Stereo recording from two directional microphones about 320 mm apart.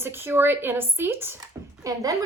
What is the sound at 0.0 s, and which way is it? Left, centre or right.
A woman's voice, centre.